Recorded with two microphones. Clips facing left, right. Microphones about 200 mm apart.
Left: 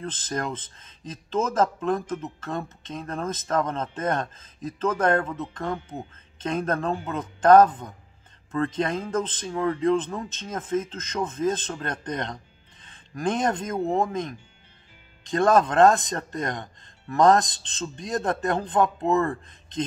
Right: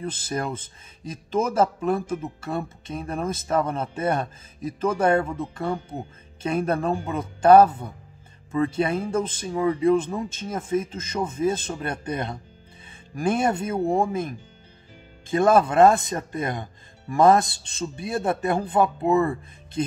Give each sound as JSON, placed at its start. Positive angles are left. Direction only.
{"t": 0.0, "sound": "speech", "side_deg": -10}